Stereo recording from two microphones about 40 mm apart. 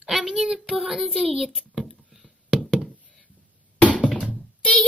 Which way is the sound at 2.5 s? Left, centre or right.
Centre.